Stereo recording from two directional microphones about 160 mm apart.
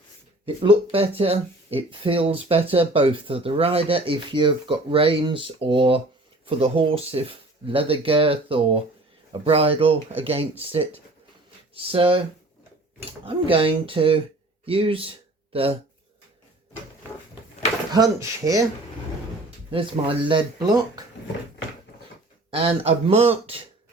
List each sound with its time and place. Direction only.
0.4 s speech: 35° right (ahead or behind)
13.2 s speech: 35° right (ahead or behind)
17.9 s speech: 20° right (ahead or behind)
19.7 s speech: 30° right (ahead or behind)
22.4 s speech: 35° right (ahead or behind)